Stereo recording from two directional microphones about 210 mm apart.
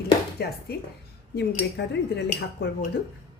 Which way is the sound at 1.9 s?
55° left (ahead or behind).